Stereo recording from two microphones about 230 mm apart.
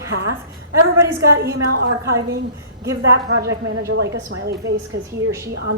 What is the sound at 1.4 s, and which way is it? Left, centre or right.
A woman's voice, right.